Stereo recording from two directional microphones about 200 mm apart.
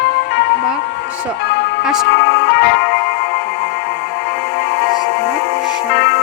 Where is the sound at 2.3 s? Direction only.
45° left (ahead or behind).